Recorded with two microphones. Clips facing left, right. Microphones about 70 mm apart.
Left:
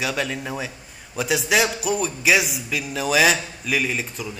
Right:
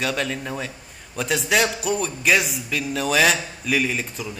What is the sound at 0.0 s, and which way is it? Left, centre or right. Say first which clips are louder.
Speech: even; centre.